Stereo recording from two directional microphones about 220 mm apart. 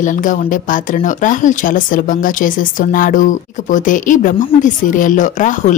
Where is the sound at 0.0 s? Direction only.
35° left (ahead or behind).